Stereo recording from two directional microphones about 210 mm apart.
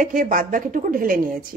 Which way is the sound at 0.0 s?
40° right (ahead or behind).